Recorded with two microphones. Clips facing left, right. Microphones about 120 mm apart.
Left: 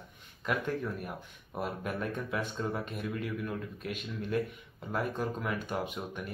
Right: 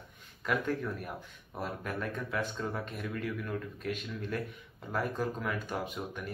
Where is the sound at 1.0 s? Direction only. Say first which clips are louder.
Even; 10° left (ahead or behind).